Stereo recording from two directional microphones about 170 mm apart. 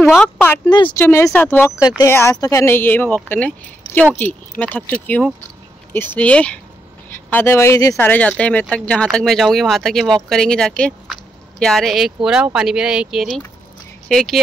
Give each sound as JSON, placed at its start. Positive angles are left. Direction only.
{"t": 0.1, "sound": "speech", "side_deg": 10}
{"t": 0.7, "sound": "speech", "side_deg": 25}
{"t": 0.9, "sound": "speech", "side_deg": 15}